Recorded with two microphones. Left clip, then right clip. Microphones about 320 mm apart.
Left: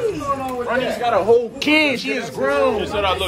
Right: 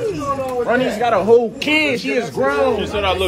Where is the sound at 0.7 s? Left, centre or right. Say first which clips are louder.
Right 3 dB; centre.